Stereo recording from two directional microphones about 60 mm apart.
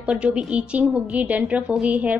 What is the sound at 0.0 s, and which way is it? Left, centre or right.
A woman's voice, centre.